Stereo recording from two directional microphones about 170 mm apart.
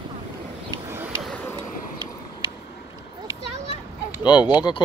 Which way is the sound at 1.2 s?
5° left (ahead or behind).